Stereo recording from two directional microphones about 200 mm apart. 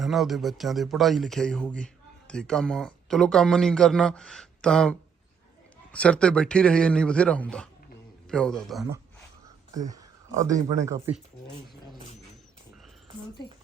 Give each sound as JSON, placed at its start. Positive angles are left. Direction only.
{"t": 0.0, "sound": "speech", "side_deg": 0}
{"t": 9.7, "sound": "speech", "side_deg": -15}